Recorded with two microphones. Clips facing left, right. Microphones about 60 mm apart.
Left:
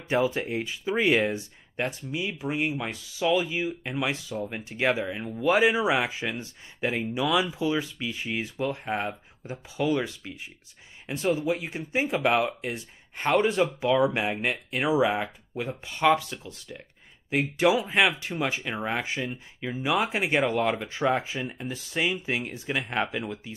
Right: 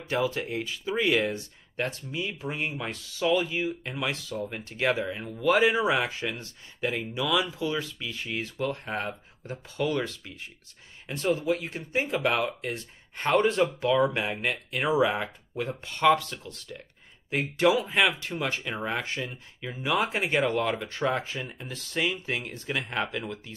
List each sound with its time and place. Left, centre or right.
0.0 s speech: centre
23.2 s speech: centre